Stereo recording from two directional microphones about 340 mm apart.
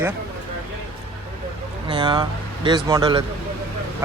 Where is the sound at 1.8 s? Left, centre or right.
Centre.